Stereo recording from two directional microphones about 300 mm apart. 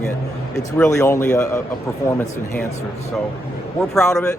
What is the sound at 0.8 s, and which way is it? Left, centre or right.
Speech, centre.